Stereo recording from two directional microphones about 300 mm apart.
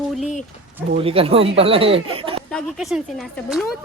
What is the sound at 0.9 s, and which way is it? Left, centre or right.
Speech, centre.